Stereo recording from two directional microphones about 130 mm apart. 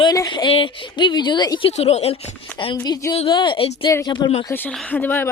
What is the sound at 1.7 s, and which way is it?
Speech, 55° left (ahead or behind).